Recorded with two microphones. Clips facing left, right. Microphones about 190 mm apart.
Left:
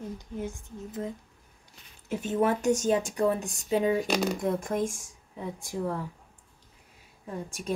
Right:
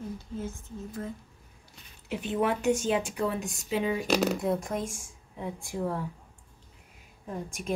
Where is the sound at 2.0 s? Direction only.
45° left (ahead or behind).